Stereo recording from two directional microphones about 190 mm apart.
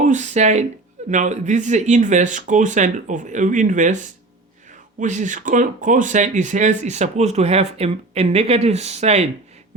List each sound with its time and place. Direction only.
0.0 s speech: 40° right (ahead or behind)